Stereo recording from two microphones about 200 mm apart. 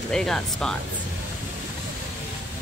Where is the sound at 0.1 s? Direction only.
5° left (ahead or behind).